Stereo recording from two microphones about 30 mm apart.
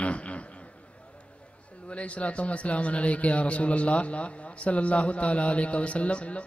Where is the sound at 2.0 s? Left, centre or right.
Left.